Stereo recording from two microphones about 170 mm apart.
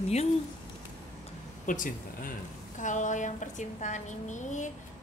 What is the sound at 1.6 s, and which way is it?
A woman's voice, 50° left (ahead or behind).